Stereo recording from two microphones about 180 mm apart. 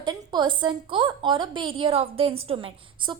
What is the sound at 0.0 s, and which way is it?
A woman's voice, 25° right (ahead or behind).